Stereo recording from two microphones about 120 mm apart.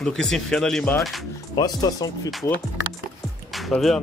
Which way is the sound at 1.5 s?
35° left (ahead or behind).